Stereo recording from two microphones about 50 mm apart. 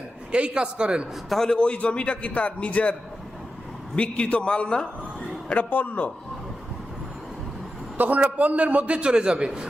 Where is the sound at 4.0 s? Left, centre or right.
Left.